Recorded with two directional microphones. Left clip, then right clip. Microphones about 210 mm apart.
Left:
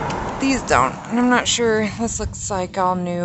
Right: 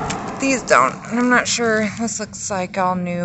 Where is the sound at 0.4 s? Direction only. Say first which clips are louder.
Right 3 dB; 5° left (ahead or behind).